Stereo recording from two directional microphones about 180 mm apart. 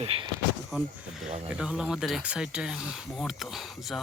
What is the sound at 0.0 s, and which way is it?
Speech, 30° right (ahead or behind).